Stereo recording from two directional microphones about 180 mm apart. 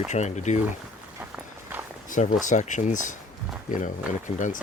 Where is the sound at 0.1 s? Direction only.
40° left (ahead or behind).